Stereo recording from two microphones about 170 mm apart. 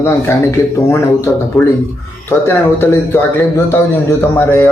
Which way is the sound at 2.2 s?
15° left (ahead or behind).